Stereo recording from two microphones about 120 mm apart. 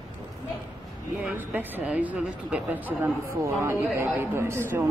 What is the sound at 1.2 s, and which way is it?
A man's voice, 15° right (ahead or behind).